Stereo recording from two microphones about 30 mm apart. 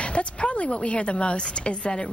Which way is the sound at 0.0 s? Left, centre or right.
Left.